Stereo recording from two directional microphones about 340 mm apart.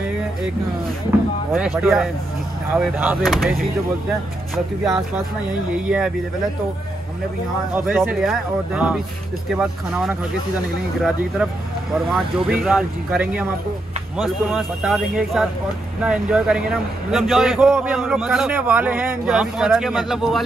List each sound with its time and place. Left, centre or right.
1.5 s a man's voice: centre
4.8 s a man's voice: centre
7.7 s a man's voice: centre
11.9 s a man's voice: centre